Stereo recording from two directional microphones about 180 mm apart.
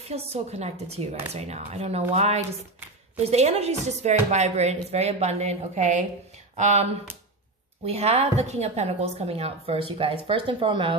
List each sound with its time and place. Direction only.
0.0 s a woman's voice: 35° right (ahead or behind)